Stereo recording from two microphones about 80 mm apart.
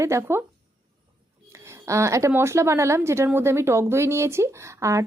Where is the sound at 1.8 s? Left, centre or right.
Right.